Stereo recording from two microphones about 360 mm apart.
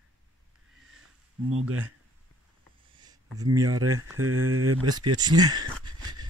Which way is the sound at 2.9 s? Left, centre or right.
Centre.